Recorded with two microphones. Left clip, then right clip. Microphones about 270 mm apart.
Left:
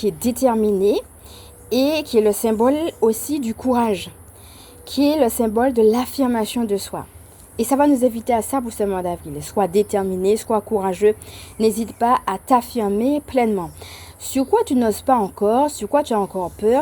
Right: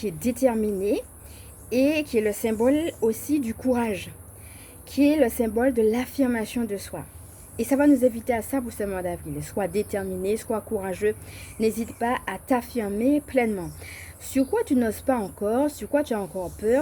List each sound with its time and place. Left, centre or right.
0.0 s a woman's voice: left